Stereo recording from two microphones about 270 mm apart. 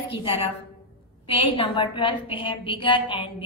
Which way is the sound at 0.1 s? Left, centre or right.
Centre.